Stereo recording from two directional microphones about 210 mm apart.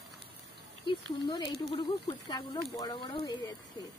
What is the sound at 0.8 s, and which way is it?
Speech, 20° left (ahead or behind).